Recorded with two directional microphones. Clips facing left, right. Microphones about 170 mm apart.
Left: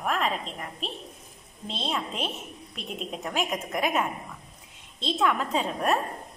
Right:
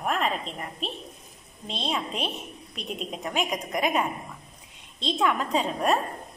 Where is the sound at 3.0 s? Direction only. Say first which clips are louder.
Even; centre (ahead or behind).